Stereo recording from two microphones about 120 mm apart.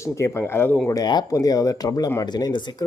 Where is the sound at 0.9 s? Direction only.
35° left (ahead or behind).